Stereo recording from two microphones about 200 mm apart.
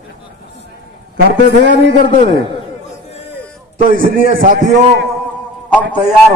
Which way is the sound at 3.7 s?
45° right (ahead or behind).